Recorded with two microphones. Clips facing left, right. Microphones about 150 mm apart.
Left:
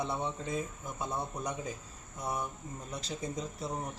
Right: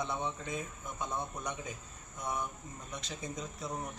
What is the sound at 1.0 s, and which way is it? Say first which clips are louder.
Speech: left 2 dB; 30° left (ahead or behind).